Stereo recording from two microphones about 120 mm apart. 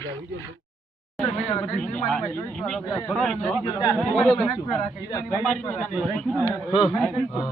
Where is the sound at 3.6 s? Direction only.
35° left (ahead or behind).